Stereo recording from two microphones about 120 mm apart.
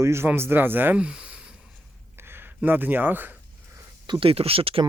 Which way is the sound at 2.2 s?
20° right (ahead or behind).